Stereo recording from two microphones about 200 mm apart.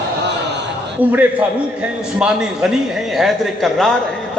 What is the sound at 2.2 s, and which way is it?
A man's voice, 5° right (ahead or behind).